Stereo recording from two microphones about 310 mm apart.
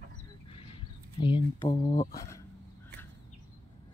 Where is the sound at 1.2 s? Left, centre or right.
Centre.